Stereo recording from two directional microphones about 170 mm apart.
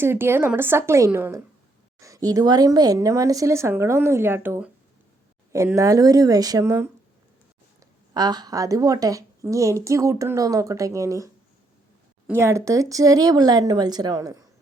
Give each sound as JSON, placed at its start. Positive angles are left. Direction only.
{"t": 0.0, "sound": "a woman's voice", "side_deg": -15}
{"t": 8.1, "sound": "a woman's voice", "side_deg": -25}
{"t": 12.3, "sound": "a woman's voice", "side_deg": -15}